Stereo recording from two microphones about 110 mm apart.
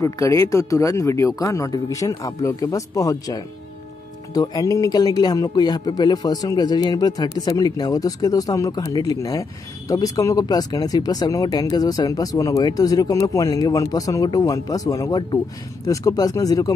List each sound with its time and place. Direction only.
0.0 s speech: 30° left (ahead or behind)